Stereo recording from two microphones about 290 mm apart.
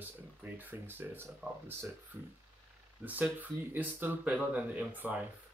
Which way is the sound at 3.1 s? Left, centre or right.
Centre.